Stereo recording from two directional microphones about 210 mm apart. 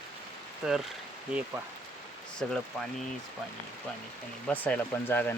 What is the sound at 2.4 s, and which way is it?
Speech, 5° left (ahead or behind).